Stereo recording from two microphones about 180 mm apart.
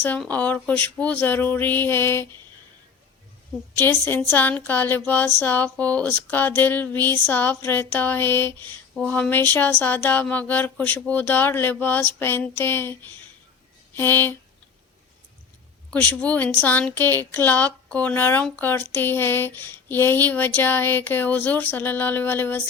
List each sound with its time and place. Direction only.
0.0 s speech: 10° left (ahead or behind)
3.8 s speech: 10° left (ahead or behind)
13.9 s a sound: 10° left (ahead or behind)
15.9 s speech: 10° left (ahead or behind)